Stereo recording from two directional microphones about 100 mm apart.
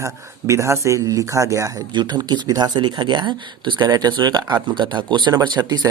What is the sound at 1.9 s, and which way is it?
Speech, 50° right (ahead or behind).